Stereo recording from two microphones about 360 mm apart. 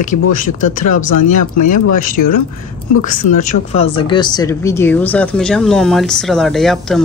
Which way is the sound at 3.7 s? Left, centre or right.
Centre.